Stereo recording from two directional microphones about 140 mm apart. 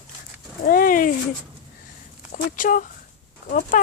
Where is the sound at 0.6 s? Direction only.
90° left.